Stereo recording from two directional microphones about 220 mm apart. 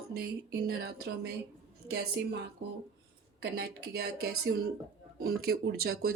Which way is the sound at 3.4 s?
45° right (ahead or behind).